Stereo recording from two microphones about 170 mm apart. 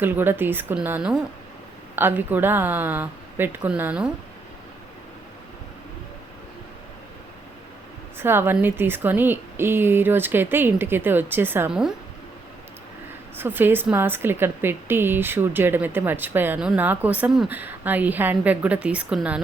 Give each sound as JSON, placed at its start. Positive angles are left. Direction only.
{"t": 0.0, "sound": "a woman's voice", "side_deg": -10}
{"t": 8.2, "sound": "a woman's voice", "side_deg": -15}
{"t": 13.3, "sound": "a woman's voice", "side_deg": -10}